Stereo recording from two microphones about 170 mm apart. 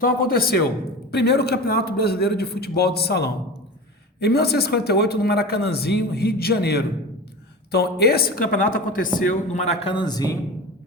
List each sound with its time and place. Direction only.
0.0 s a woman's voice: 60° left (ahead or behind)
1.1 s a man's voice: 75° left (ahead or behind); by 9.7 s 50° left (ahead or behind)
9.8 s a man's voice: 25° left (ahead or behind)